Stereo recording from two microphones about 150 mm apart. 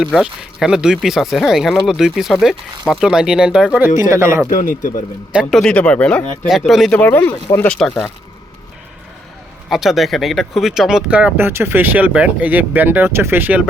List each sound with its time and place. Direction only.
0.0 s speech: centre (ahead or behind)
4.4 s speech: 65° left (ahead or behind)
5.3 s speech: 5° right (ahead or behind)
7.0 s speech: 15° left (ahead or behind)
9.6 s speech: centre (ahead or behind)